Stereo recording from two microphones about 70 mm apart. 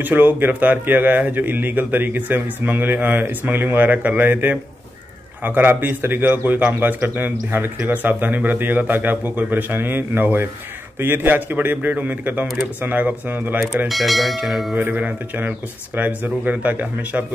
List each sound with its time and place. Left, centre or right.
0.0 s a man's voice: right
13.8 s speech: centre
14.9 s a man's voice: right